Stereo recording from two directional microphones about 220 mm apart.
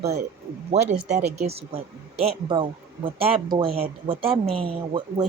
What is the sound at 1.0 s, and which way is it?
Speech, 30° right (ahead or behind).